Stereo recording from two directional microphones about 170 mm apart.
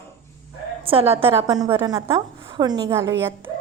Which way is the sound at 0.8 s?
35° right (ahead or behind).